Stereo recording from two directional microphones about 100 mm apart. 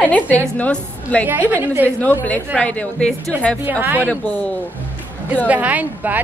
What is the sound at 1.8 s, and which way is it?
Speech, 15° left (ahead or behind).